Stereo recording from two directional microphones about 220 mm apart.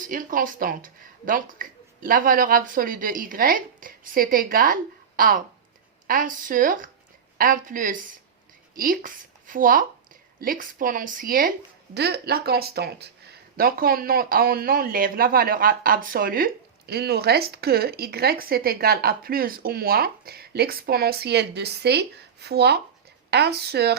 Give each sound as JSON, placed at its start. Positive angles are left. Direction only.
{"t": 0.0, "sound": "speech", "side_deg": -40}